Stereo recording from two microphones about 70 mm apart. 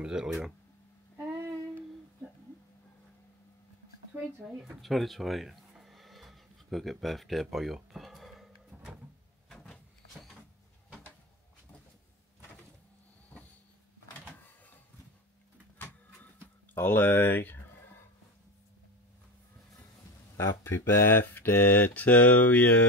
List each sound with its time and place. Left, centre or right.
0.0 s speech: centre
4.8 s a sound: centre
9.5 s cupboard open or close: centre
16.7 s speech: left
20.3 s speech: left